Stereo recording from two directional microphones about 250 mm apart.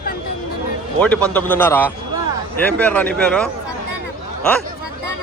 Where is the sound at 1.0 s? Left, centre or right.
Centre.